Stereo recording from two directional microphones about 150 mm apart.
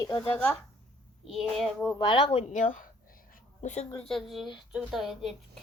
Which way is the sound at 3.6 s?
50° left (ahead or behind).